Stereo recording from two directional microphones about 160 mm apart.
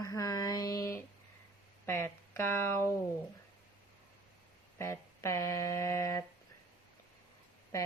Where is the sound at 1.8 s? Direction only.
15° left (ahead or behind).